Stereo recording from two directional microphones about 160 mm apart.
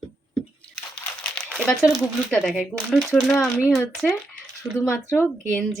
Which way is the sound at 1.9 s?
Centre (ahead or behind).